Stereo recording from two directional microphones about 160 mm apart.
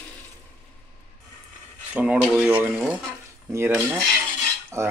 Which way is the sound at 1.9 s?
10° right (ahead or behind).